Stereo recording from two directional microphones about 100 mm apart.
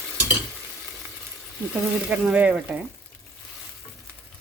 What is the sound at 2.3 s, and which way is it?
Frying, 15° right (ahead or behind).